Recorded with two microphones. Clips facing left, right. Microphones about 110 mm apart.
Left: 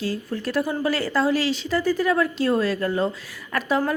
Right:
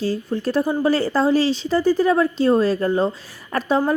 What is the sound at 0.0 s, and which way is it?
A woman's voice, 30° right (ahead or behind).